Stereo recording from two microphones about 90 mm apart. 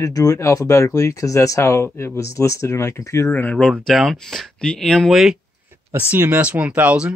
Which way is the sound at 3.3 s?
15° left (ahead or behind).